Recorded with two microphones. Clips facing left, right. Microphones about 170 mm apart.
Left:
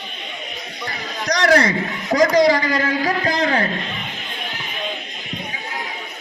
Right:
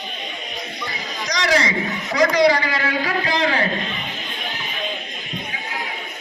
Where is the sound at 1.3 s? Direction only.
55° left (ahead or behind).